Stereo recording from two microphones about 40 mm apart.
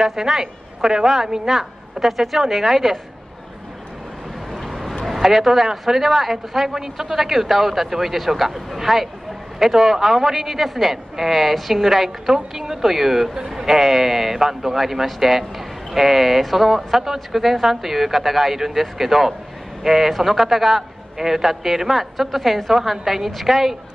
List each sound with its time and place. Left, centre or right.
0.0 s a woman's voice: centre
4.5 s vehicle: centre
5.0 s a woman's voice: centre